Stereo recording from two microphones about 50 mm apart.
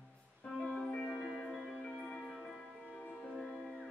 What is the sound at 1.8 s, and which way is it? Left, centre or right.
Music, centre.